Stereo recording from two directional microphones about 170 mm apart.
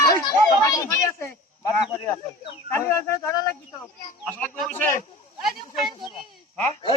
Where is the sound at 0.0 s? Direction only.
20° left (ahead or behind).